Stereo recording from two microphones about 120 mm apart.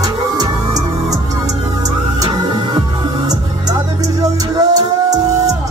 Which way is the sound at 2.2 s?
35° right (ahead or behind).